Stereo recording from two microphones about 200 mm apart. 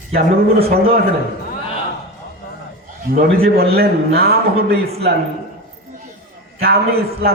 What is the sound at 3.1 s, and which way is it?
A man's voice, 50° right (ahead or behind).